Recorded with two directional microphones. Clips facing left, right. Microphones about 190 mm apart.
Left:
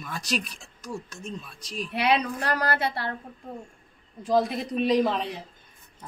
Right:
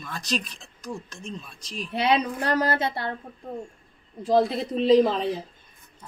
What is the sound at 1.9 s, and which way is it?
A woman's voice, 25° right (ahead or behind).